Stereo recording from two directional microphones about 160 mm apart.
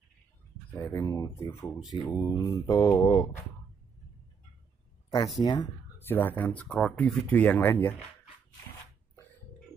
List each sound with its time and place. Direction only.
0.7 s speech: 15° left (ahead or behind)
2.0 s mantra: 20° left (ahead or behind)
5.4 s mantra: 25° left (ahead or behind)
5.9 s speech: 15° left (ahead or behind)